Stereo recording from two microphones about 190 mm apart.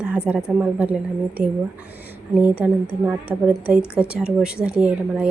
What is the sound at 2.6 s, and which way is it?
Speech, 5° right (ahead or behind).